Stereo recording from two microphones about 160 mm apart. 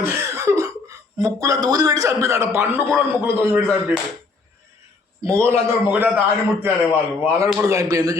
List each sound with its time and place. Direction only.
0.0 s a sound: 20° right (ahead or behind)
2.2 s a man's voice: 20° right (ahead or behind)
5.2 s a man's voice: 15° right (ahead or behind)